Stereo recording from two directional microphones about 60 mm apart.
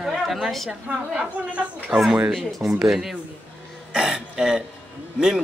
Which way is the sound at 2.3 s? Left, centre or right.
Centre.